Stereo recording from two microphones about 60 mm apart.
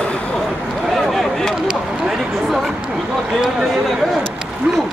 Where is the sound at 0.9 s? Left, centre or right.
Centre.